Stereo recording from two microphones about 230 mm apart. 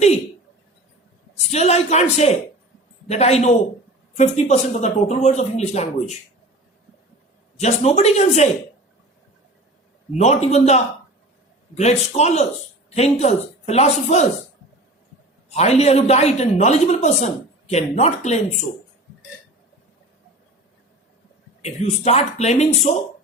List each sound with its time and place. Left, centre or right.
1.5 s speech: left
7.6 s speech: left
10.2 s speech: left
15.4 s speech: left
21.6 s speech: left